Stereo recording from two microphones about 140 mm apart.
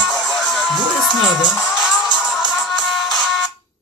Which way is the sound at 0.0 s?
5° left (ahead or behind).